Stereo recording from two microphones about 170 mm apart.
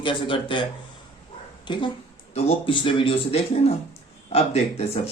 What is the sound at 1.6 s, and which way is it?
A woman's voice, 25° left (ahead or behind).